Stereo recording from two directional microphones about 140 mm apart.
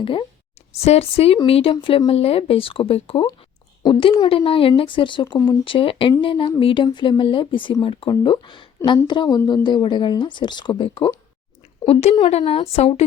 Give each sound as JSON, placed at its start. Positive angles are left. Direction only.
{"t": 0.0, "sound": "a woman's voice", "side_deg": 40}